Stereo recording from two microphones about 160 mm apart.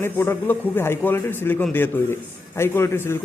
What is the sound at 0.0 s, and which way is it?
A man's voice, 15° left (ahead or behind).